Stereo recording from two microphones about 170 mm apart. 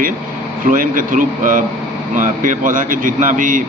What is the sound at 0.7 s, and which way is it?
Speech, 55° right (ahead or behind).